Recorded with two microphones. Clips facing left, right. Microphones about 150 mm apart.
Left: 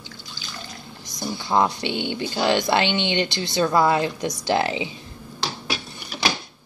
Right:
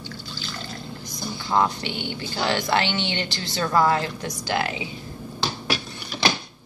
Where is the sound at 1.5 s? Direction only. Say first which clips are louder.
Left 1 dB; 20° left (ahead or behind).